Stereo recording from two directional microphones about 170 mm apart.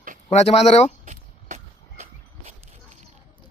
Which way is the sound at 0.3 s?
40° left (ahead or behind).